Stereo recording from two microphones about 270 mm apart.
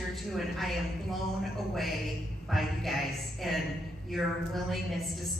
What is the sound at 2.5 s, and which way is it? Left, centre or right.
A woman's voice, centre.